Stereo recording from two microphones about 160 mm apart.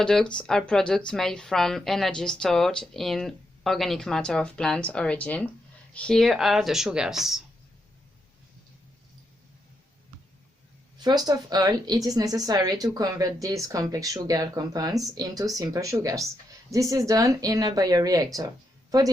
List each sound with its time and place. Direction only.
0.0 s speech: 5° left (ahead or behind)
10.9 s a woman's voice: 25° right (ahead or behind)